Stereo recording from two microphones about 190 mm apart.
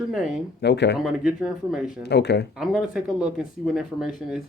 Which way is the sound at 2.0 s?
60° left (ahead or behind).